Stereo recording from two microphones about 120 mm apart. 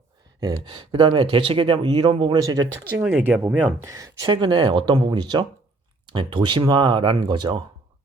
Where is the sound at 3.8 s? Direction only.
25° right (ahead or behind).